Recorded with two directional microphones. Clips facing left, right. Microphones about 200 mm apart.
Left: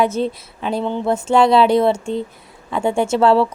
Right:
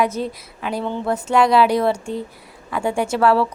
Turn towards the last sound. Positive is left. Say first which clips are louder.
# left 3 dB
turn(degrees=25)  # may be behind; listen again after turning